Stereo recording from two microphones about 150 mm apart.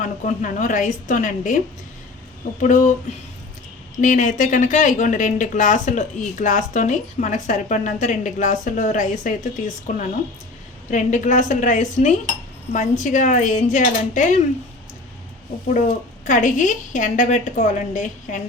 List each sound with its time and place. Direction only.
0.0 s speech: 60° left (ahead or behind)
2.6 s speech: 55° left (ahead or behind)
4.0 s speech: 55° left (ahead or behind)
10.9 s speech: 55° left (ahead or behind)
16.2 s speech: 60° left (ahead or behind)